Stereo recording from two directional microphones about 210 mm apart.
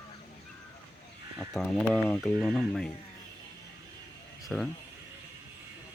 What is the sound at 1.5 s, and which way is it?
Speech, 5° left (ahead or behind).